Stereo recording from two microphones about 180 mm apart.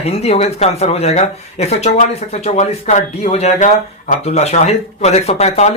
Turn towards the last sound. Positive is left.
turn(degrees=40)  # may be behind; listen again after turning